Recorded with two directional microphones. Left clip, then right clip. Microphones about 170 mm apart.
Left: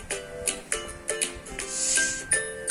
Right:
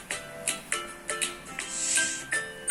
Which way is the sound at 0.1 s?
50° left (ahead or behind).